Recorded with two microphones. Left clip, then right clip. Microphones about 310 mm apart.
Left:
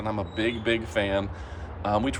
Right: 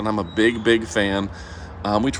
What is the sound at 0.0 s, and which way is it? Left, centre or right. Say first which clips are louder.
Speech: right 8 dB; right.